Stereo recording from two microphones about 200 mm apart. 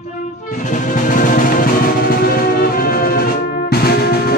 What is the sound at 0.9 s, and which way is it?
Music, 40° left (ahead or behind).